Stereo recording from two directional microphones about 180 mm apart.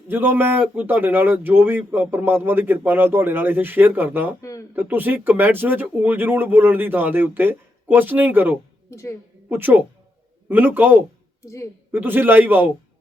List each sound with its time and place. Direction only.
0.1 s speech: 10° right (ahead or behind)
4.4 s speech: 20° left (ahead or behind)
4.7 s speech: 10° right (ahead or behind)
8.9 s a woman's voice: 15° left (ahead or behind)
9.5 s speech: 10° right (ahead or behind)